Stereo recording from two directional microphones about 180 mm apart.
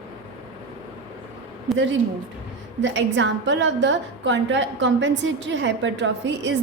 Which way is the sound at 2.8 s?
90° right.